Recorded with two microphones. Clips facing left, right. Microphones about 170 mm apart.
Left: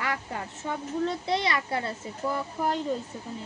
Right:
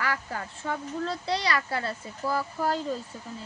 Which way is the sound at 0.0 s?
25° left (ahead or behind).